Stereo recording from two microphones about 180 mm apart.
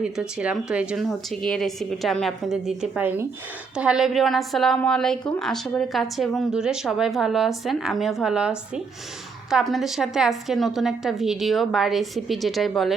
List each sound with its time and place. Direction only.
0.0 s a woman's voice: 5° right (ahead or behind)